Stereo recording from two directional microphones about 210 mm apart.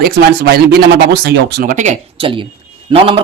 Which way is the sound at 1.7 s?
35° right (ahead or behind).